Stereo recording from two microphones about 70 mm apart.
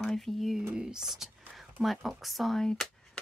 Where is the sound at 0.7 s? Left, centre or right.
Centre.